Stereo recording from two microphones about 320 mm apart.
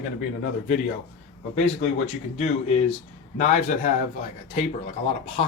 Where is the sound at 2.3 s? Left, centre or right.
Left.